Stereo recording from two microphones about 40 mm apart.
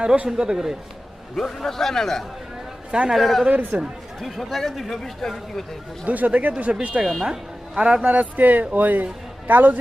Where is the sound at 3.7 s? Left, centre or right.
Right.